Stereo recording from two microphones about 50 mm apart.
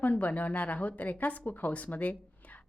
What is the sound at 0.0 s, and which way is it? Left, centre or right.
A woman's voice, left.